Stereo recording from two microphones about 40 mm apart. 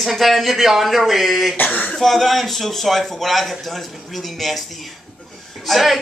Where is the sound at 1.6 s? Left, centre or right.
Left.